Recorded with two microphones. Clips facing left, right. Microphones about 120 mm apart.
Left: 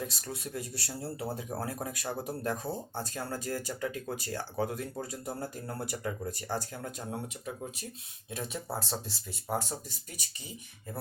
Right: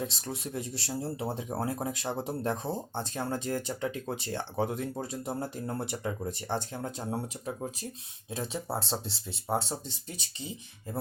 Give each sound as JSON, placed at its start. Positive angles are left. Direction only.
{"t": 0.0, "sound": "speech", "side_deg": -25}